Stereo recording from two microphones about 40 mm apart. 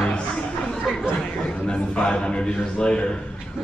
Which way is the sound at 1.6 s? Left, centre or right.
Left.